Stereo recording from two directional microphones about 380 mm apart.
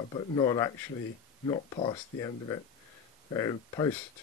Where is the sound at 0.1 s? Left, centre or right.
Centre.